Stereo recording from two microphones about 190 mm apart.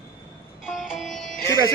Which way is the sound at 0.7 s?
Centre (ahead or behind).